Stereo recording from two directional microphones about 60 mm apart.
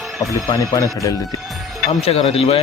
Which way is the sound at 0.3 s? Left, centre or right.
Left.